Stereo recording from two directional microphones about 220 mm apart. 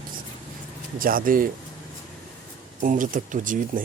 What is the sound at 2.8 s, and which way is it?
Speech, 35° right (ahead or behind).